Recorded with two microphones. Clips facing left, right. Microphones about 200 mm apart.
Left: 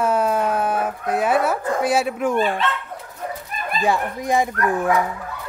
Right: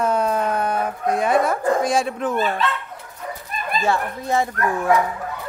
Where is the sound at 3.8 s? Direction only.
15° left (ahead or behind).